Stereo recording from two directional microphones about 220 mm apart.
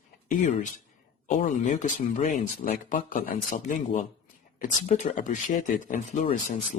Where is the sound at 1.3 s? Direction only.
35° left (ahead or behind).